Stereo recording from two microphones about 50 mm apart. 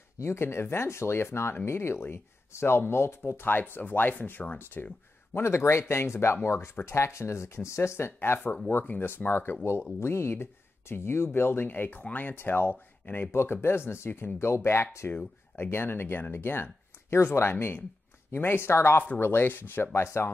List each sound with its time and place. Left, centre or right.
0.2 s speech: left
3.4 s speech: left
5.3 s speech: left
8.2 s speech: left
13.3 s speech: left
17.1 s speech: left
19.9 s speech: left